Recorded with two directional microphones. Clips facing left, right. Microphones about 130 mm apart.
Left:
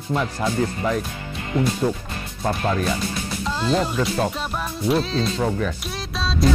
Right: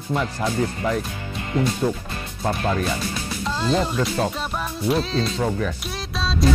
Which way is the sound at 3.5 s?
10° left (ahead or behind).